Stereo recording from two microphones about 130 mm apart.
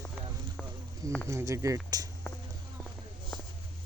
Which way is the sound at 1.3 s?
25° right (ahead or behind).